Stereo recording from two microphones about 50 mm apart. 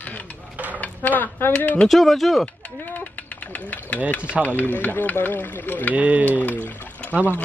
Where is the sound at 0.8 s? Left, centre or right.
Left.